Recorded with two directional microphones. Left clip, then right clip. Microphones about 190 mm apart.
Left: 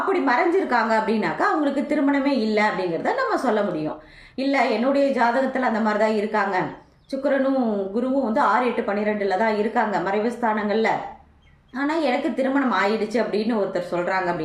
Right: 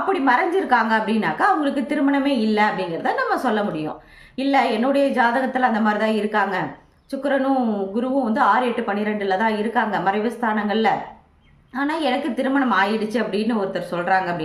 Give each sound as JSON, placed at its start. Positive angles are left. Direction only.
{"t": 0.1, "sound": "a woman's voice", "side_deg": -20}